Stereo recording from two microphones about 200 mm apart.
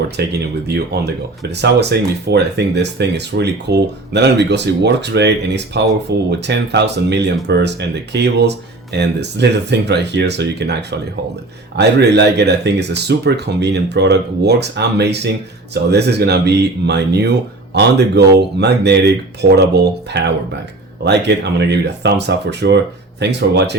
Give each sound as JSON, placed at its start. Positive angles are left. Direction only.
{"t": 0.2, "sound": "speech", "side_deg": -55}